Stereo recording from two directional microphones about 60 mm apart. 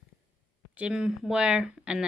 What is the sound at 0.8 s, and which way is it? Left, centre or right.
A woman's voice, centre.